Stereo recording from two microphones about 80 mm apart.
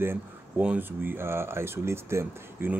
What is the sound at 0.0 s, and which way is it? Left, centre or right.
Speech, right.